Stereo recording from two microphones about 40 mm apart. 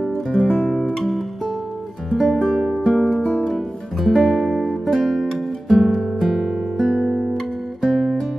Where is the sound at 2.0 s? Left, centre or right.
Centre.